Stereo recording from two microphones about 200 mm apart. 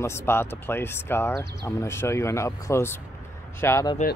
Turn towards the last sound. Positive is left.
turn(degrees=15)  # may be behind; listen again after turning